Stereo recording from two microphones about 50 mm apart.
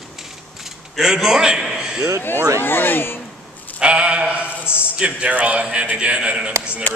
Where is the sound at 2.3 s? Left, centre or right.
Right.